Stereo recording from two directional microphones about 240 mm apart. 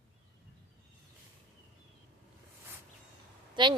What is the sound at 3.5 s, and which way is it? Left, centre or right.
Speech, centre.